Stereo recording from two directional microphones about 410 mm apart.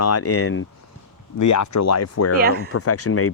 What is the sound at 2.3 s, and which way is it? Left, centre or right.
Speech, right.